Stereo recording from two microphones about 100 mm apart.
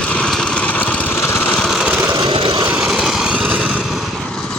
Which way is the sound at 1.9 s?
20° right (ahead or behind).